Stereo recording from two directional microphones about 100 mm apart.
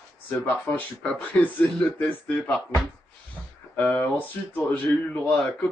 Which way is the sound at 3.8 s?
15° left (ahead or behind).